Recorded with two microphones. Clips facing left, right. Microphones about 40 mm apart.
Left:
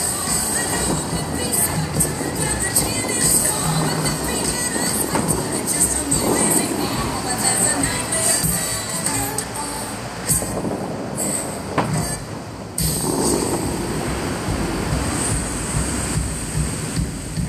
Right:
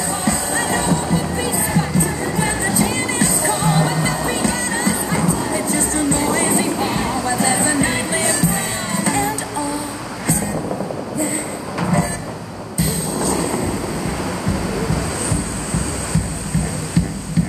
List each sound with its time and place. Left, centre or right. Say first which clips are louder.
0.2 s music: right 5 dB; right
12.7 s music: right 1 dB; right